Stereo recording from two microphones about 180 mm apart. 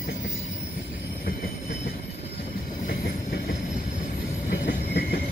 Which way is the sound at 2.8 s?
60° left (ahead or behind).